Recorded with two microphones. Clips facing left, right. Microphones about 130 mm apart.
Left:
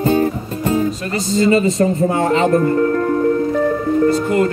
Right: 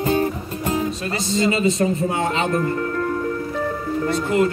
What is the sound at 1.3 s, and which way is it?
Speech, 35° left (ahead or behind).